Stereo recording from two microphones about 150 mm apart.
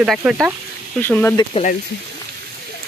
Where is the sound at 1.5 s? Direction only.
40° left (ahead or behind).